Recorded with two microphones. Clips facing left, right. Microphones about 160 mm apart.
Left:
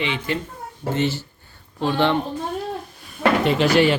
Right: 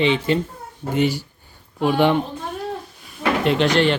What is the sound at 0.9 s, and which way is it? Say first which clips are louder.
Speech: right 4 dB; 15° right (ahead or behind).